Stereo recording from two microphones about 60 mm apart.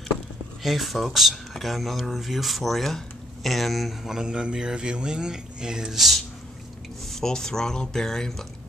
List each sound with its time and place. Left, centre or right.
0.6 s speech: centre
3.4 s mantra: centre
7.1 s speech: centre